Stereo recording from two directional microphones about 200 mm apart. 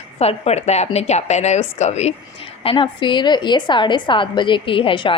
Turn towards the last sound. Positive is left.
turn(degrees=25)  # may be behind; listen again after turning